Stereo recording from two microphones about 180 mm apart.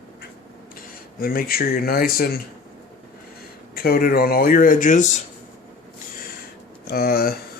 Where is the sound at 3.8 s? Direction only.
55° left (ahead or behind).